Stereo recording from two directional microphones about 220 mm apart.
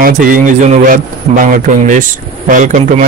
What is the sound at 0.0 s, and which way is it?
A man's voice, 40° right (ahead or behind).